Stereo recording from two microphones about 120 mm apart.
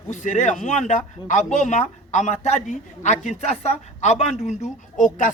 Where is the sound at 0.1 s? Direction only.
90° left.